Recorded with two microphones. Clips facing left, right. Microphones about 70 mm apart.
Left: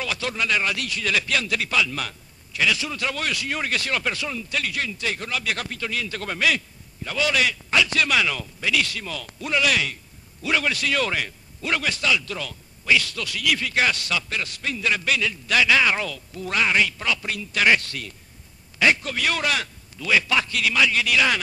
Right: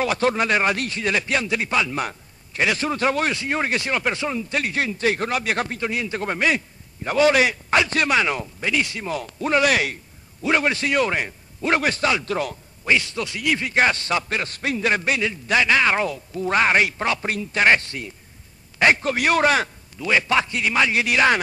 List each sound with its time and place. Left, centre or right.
0.0 s a man's voice: right
7.1 s a man's voice: right
8.1 s speech: right
10.4 s a man's voice: right
12.9 s a man's voice: right
15.5 s a man's voice: right
18.8 s a man's voice: right